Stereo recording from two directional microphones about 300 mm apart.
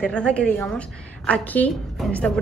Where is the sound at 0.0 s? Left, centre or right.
Centre.